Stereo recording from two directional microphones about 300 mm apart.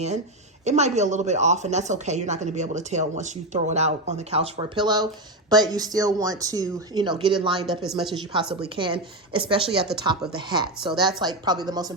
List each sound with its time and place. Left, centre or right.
0.6 s speech: right